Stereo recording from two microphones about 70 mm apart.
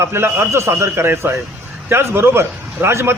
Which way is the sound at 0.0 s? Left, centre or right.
Right.